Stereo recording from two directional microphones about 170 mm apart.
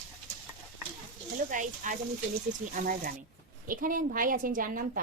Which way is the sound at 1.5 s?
50° right (ahead or behind).